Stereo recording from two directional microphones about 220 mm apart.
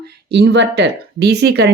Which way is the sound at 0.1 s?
50° right (ahead or behind).